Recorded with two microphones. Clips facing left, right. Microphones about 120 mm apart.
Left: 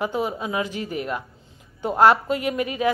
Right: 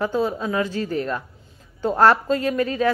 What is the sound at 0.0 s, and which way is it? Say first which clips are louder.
A woman's voice: right 3 dB; 15° left (ahead or behind).